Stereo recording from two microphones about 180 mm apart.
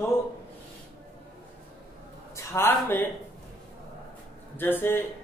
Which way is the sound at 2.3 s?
15° left (ahead or behind).